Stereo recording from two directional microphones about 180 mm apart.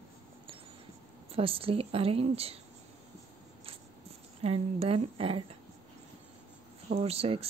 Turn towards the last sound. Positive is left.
turn(degrees=-35)  # may be behind; listen again after turning